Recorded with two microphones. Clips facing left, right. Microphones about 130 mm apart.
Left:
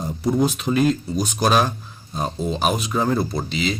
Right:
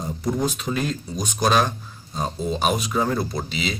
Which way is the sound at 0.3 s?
5° left (ahead or behind).